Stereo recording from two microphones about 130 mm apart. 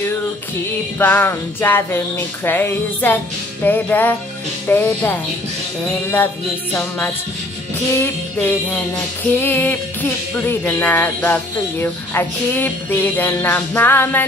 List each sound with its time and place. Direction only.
0.9 s music: 15° left (ahead or behind)
6.7 s music: 15° left (ahead or behind)